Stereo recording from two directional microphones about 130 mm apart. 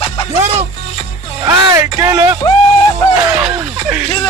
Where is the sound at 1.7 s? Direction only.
25° right (ahead or behind).